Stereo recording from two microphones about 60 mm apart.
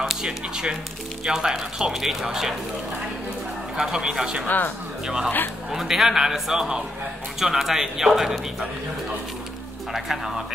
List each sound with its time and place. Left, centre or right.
0.0 s speech: centre
3.7 s speech: centre
4.5 s speech: left
5.0 s speech: centre
9.9 s speech: centre